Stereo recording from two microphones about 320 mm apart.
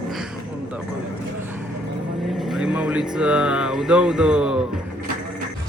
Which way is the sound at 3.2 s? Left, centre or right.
Centre.